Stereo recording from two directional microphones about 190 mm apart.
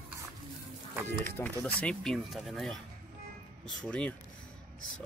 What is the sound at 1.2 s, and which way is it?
Speech, 10° left (ahead or behind).